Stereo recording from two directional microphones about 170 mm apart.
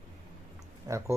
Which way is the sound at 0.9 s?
20° right (ahead or behind).